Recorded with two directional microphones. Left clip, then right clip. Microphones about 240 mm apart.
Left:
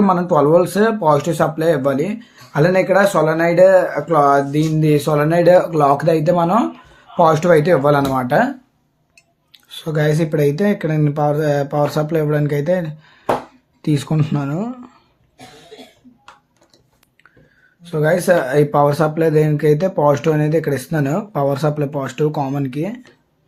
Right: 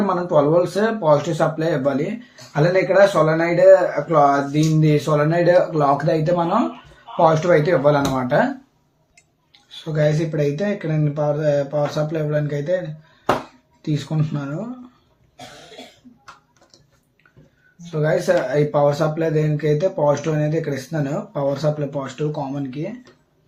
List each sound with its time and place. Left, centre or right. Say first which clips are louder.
0.1 s speech: left 2 dB; left
9.6 s speech: left 2 dB; left
13.8 s speech: left 6 dB; left
17.9 s speech: left 4 dB; left